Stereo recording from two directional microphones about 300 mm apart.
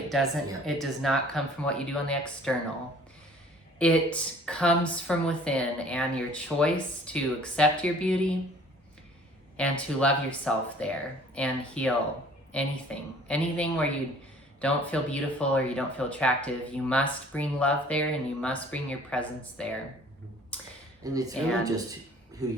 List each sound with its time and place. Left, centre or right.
0.1 s speech: centre
3.8 s speech: centre
9.6 s speech: centre
20.5 s a sound: centre
21.0 s speech: centre